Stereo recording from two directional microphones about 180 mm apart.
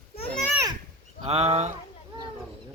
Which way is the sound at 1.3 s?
35° right (ahead or behind).